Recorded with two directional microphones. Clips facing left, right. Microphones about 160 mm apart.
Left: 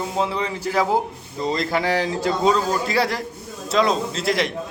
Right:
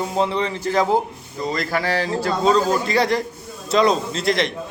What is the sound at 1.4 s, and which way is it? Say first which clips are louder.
Speech: left 1 dB; 25° left (ahead or behind).